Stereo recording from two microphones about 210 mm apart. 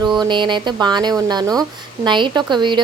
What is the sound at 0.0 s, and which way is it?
A woman's voice, 20° right (ahead or behind).